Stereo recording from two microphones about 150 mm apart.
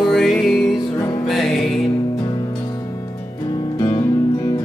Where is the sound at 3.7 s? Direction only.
25° left (ahead or behind).